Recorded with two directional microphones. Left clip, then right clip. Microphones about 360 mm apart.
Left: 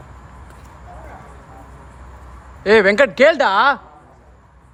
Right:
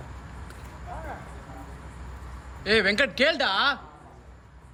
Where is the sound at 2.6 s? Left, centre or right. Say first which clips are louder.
Left 10 dB; centre.